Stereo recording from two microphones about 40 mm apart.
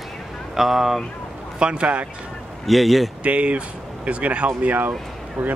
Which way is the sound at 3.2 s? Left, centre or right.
Right.